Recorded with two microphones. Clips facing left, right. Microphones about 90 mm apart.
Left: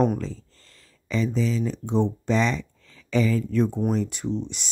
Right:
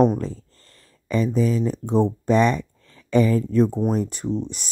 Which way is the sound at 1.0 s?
45° right (ahead or behind).